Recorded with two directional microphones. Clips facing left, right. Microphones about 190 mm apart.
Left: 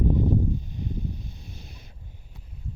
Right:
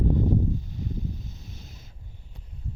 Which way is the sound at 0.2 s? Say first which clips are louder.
Left 1 dB; 20° left (ahead or behind).